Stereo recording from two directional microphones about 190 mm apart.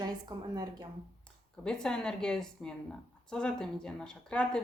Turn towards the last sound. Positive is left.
turn(degrees=5)  # may be behind; listen again after turning